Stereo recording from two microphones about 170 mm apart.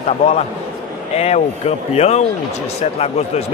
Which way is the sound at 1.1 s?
35° left (ahead or behind).